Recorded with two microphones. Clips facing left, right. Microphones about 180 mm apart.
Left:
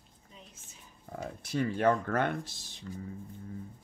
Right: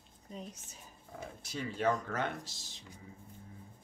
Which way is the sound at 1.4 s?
55° left (ahead or behind).